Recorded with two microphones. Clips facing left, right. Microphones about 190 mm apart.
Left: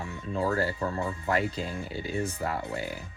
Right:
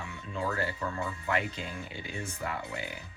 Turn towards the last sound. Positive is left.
turn(degrees=35)  # may be behind; listen again after turning